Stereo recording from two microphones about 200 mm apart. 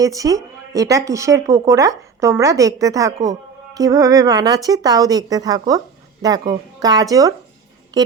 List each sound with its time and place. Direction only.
0.0 s speech: 15° right (ahead or behind)